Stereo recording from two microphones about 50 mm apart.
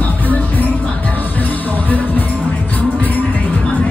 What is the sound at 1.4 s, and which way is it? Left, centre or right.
Music, left.